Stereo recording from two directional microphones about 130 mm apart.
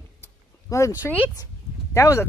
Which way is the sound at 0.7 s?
25° left (ahead or behind).